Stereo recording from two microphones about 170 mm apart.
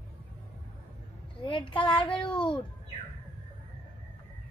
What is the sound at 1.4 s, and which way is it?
A child's voice, 30° left (ahead or behind).